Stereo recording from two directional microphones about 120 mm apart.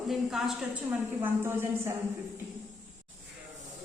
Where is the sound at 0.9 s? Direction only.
15° right (ahead or behind).